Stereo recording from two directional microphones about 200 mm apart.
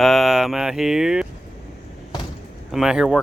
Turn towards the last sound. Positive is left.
turn(degrees=-5)  # may be behind; listen again after turning